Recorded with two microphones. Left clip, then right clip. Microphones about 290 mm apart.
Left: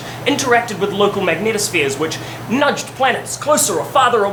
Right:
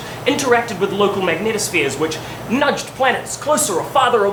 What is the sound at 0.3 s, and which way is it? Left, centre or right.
Speech, centre.